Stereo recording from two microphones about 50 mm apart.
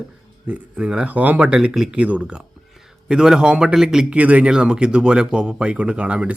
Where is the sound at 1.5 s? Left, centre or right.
Centre.